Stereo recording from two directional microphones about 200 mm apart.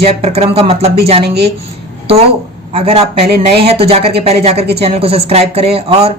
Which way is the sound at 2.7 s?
30° right (ahead or behind).